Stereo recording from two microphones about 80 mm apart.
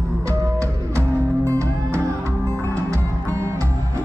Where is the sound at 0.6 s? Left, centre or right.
Right.